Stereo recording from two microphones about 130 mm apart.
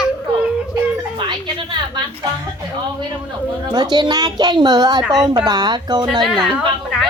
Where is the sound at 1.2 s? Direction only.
35° right (ahead or behind).